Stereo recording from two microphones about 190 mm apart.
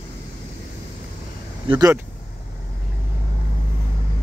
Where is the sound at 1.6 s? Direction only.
20° right (ahead or behind).